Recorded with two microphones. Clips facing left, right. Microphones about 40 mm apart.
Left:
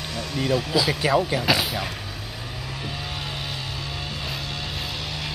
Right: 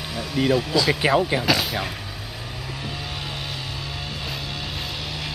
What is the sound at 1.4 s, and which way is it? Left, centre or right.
Speech, centre.